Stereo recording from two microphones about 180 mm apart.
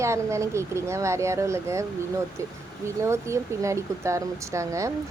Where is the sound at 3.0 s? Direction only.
15° right (ahead or behind).